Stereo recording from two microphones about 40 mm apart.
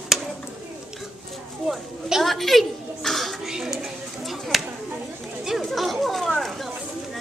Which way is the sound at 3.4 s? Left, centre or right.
Centre.